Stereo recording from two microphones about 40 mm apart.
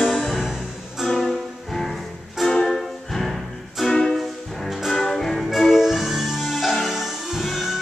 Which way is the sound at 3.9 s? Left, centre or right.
Centre.